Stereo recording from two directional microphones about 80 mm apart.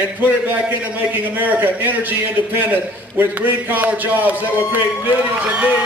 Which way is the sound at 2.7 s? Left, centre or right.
Right.